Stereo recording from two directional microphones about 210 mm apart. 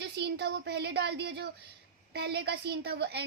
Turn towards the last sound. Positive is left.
turn(degrees=-50)  # may be behind; listen again after turning